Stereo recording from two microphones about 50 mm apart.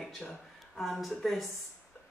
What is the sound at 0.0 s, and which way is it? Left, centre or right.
Speech, centre.